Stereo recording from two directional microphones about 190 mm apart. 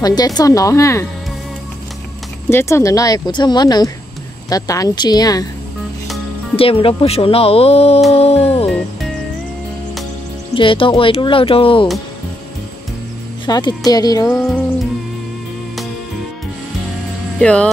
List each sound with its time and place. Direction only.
0.0 s speech: 20° left (ahead or behind)
2.5 s speech: 15° left (ahead or behind)
6.5 s speech: 30° left (ahead or behind)
8.6 s music: 5° left (ahead or behind)
10.5 s speech: 25° left (ahead or behind)
13.5 s speech: 20° left (ahead or behind)
14.3 s music: centre (ahead or behind)
17.4 s speech: 5° left (ahead or behind)